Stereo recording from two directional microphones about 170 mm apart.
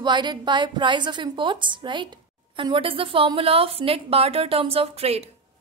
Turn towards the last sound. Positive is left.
turn(degrees=-35)  # may be behind; listen again after turning